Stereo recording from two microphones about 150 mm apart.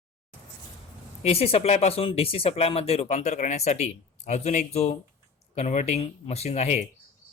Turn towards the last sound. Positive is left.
turn(degrees=45)  # may be behind; listen again after turning